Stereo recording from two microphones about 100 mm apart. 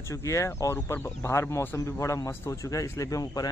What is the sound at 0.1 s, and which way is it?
Speech, 30° left (ahead or behind).